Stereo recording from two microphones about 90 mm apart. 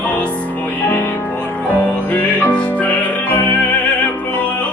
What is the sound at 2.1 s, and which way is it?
Music, 15° left (ahead or behind).